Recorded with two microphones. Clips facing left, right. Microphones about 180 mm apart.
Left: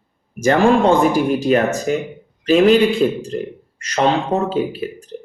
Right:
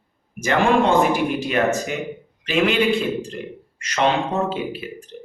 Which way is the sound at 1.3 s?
40° left (ahead or behind).